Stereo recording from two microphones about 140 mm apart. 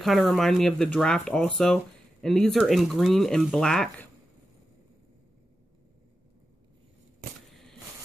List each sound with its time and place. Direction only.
0.0 s speech: centre (ahead or behind)